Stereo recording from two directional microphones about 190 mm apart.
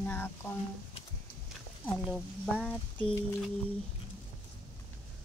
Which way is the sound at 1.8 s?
Centre (ahead or behind).